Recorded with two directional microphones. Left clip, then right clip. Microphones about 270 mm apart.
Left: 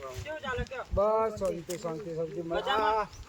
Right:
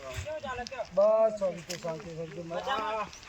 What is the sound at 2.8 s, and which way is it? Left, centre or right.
Speech, centre.